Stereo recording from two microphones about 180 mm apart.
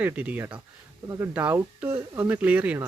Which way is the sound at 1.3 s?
10° right (ahead or behind).